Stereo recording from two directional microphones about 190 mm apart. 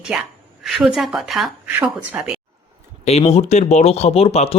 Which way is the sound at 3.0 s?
35° left (ahead or behind).